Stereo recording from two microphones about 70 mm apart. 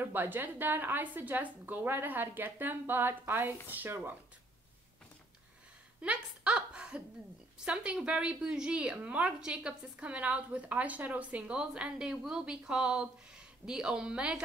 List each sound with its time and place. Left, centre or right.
0.0 s a woman's voice: right
5.9 s a sound: centre
7.6 s a woman's voice: centre